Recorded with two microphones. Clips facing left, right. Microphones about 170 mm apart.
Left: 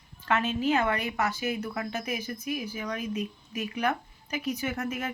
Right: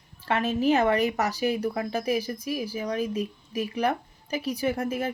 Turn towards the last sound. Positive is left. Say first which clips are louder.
# right 5 dB
turn(degrees=-30)  # may be behind; listen again after turning